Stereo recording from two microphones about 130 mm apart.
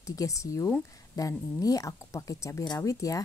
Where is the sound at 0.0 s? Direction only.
25° left (ahead or behind).